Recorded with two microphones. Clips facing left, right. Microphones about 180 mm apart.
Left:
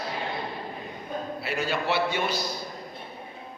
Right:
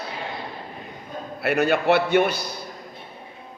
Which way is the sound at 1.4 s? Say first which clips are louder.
Right 11 dB; 60° right (ahead or behind).